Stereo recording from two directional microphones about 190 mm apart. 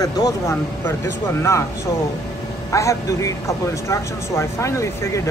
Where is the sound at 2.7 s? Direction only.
15° left (ahead or behind).